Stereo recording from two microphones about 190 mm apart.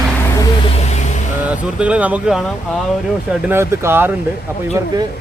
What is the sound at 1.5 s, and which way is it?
Speech, 5° right (ahead or behind).